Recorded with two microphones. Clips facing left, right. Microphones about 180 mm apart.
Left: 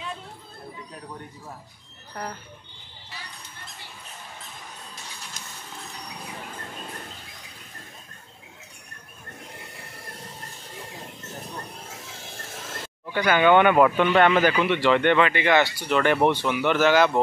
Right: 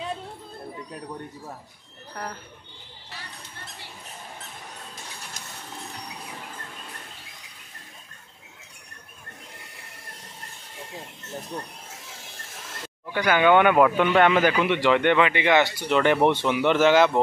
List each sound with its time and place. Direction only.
13.1 s speech: 5° right (ahead or behind)